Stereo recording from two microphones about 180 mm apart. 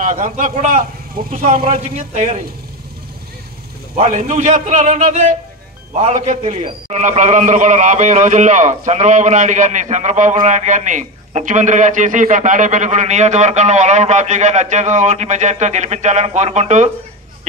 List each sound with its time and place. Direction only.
0.0 s a man's voice: 45° right (ahead or behind)
3.9 s a man's voice: 40° right (ahead or behind)